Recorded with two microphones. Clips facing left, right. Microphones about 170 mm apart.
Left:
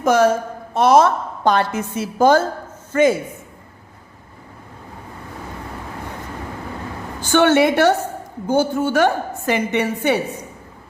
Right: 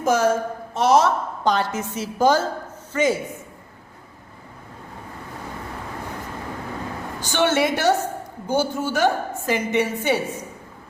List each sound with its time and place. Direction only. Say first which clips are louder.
0.0 s a woman's voice: left 4 dB; 65° left (ahead or behind)
7.2 s a woman's voice: left 6 dB; 55° left (ahead or behind)